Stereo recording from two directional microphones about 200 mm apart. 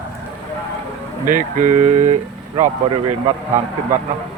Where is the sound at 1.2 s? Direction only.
40° right (ahead or behind).